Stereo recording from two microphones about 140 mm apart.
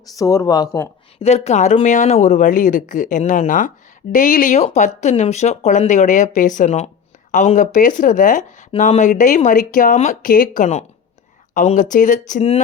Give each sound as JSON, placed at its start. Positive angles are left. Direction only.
{"t": 0.2, "sound": "speech", "side_deg": 25}
{"t": 1.2, "sound": "speech", "side_deg": 50}